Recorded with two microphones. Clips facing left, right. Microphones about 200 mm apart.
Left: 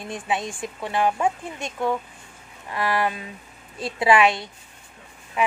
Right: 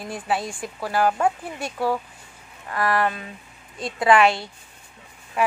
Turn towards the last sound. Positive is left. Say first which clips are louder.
# right 1 dB
turn(degrees=0)  # may be behind; listen again after turning